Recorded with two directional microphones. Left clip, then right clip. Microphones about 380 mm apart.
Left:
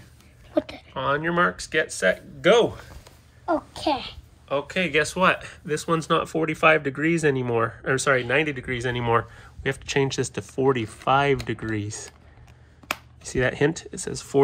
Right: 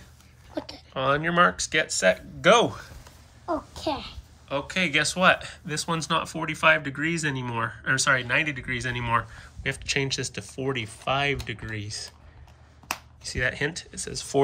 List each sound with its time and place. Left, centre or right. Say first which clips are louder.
0.9 s speech: right 1 dB; centre
3.7 s a child's voice: left 5 dB; centre
4.5 s speech: left 2 dB; centre
13.2 s speech: left 5 dB; centre